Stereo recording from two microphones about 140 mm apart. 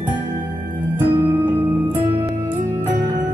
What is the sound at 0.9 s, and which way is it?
Music, 15° right (ahead or behind).